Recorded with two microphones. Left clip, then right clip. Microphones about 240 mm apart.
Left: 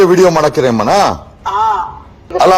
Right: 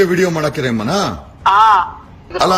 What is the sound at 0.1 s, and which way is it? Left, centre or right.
Speech, left.